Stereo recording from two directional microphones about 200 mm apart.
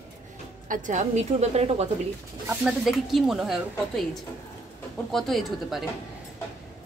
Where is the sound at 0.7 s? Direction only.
40° right (ahead or behind).